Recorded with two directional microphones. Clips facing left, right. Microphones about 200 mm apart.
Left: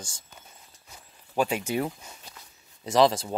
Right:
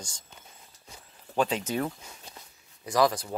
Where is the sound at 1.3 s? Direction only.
10° left (ahead or behind).